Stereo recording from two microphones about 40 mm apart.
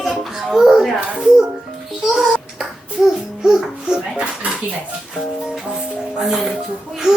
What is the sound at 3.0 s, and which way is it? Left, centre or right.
Babbling, centre.